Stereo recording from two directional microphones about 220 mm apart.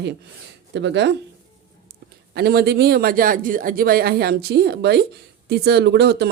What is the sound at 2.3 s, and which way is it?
Speech, 45° right (ahead or behind).